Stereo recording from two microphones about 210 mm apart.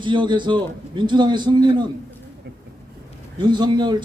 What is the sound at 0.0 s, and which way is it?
A man's voice, 20° right (ahead or behind).